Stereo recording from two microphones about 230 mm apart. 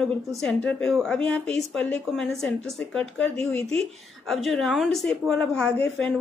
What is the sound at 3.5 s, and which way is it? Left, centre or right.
Speech, right.